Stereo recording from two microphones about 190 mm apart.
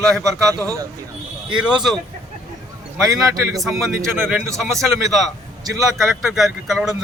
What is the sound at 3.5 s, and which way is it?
A man's voice, centre (ahead or behind).